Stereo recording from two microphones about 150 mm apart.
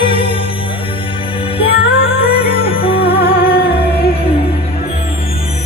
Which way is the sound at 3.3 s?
85° left.